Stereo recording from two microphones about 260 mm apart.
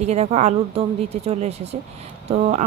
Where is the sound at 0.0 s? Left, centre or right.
Right.